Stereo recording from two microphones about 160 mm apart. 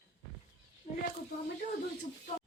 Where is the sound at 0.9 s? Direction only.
45° left (ahead or behind).